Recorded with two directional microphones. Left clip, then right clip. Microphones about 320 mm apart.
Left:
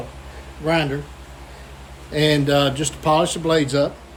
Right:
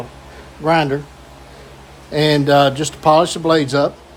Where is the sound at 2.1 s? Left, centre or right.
Centre.